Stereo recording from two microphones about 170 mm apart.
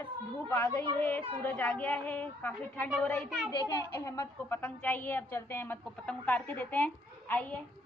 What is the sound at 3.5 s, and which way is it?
A woman's voice, 25° left (ahead or behind).